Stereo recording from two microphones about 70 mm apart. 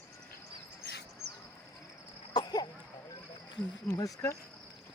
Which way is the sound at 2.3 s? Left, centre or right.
Left.